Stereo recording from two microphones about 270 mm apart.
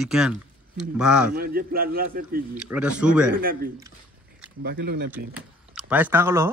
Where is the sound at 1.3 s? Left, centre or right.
Right.